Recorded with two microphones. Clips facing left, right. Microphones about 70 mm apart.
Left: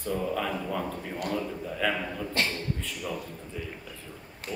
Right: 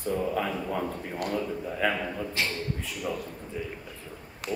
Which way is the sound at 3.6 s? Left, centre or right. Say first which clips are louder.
Right 3 dB; centre.